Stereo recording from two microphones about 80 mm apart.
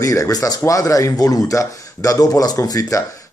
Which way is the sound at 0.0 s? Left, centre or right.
Left.